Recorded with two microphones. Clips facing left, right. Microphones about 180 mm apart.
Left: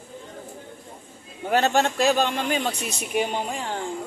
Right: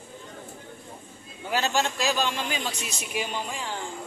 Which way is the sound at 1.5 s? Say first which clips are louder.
Left 5 dB; 60° left (ahead or behind).